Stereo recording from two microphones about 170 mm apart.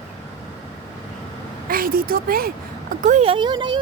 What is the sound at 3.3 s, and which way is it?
Speech, 25° right (ahead or behind).